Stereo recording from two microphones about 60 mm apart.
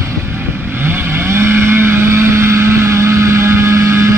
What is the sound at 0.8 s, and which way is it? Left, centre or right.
Vehicle, right.